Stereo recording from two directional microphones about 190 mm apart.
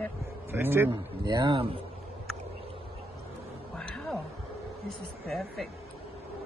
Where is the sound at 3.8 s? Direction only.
5° left (ahead or behind).